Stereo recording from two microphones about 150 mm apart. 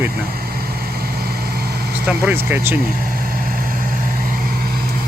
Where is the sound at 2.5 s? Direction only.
15° right (ahead or behind).